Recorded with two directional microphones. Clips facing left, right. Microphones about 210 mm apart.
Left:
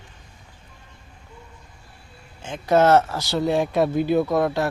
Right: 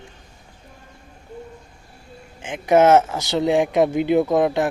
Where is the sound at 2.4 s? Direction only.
15° right (ahead or behind).